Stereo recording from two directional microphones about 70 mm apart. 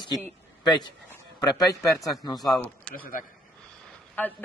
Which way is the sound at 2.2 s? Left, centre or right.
Left.